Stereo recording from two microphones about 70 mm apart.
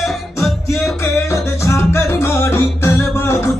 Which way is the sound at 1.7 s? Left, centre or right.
Left.